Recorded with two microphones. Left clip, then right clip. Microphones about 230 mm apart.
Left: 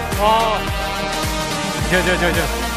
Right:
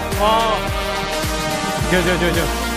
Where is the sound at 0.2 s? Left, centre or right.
Centre.